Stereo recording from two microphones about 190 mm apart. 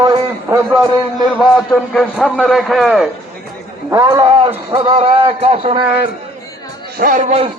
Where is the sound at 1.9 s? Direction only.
Centre (ahead or behind).